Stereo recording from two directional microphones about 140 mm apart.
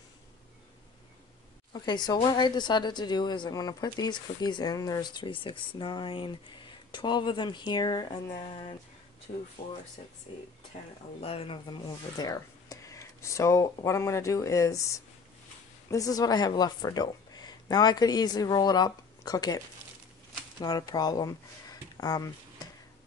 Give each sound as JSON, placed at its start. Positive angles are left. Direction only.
{"t": 1.7, "sound": "speech", "side_deg": 30}
{"t": 10.7, "sound": "speech", "side_deg": 55}
{"t": 11.2, "sound": "speech", "side_deg": 45}
{"t": 12.2, "sound": "a woman's voice", "side_deg": 25}